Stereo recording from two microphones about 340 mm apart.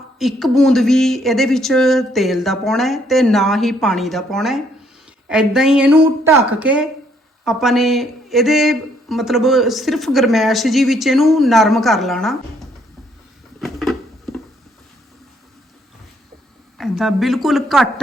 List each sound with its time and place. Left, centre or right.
0.2 s speech: centre
13.6 s a sound: centre
16.7 s speech: centre